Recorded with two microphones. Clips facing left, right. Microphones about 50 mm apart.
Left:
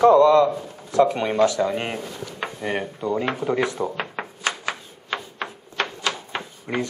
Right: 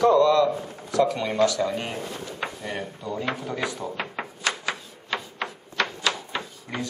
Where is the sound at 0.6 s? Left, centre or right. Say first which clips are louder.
Right 1 dB; right.